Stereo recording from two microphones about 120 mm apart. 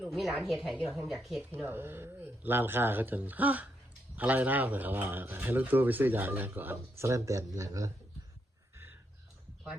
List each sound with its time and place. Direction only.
0.0 s a woman's voice: centre (ahead or behind)
1.4 s speech: 15° right (ahead or behind)